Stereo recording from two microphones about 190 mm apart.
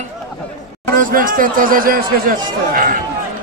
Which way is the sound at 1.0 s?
45° right (ahead or behind).